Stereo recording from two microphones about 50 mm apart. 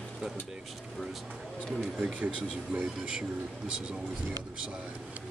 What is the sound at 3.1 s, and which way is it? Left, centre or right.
Speech, centre.